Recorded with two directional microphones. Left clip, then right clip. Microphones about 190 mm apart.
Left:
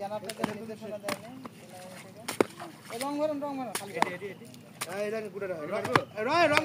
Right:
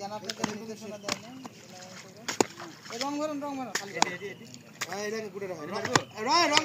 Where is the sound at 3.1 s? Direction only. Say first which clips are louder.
Left 3 dB; 55° right (ahead or behind).